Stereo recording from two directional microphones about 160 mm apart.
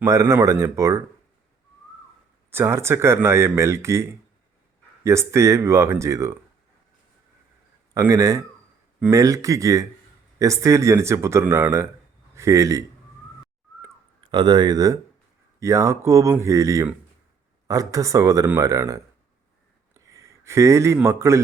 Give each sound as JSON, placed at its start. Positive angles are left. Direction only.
{"t": 0.0, "sound": "speech", "side_deg": -20}
{"t": 2.5, "sound": "speech", "side_deg": -15}
{"t": 7.9, "sound": "a man's voice", "side_deg": -20}
{"t": 14.3, "sound": "a man's voice", "side_deg": -30}